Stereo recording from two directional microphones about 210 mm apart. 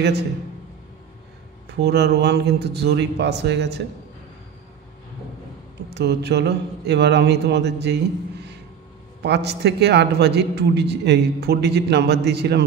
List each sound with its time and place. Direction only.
1.8 s a man's voice: 50° right (ahead or behind)
5.9 s a man's voice: 50° right (ahead or behind)
9.2 s a man's voice: 50° right (ahead or behind)